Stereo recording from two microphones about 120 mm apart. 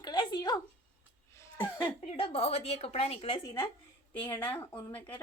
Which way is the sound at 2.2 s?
60° left (ahead or behind).